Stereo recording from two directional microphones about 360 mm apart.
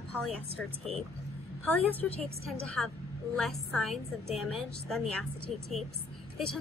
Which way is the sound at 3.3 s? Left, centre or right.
Centre.